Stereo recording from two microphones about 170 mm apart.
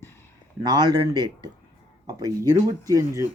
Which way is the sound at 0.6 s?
25° right (ahead or behind).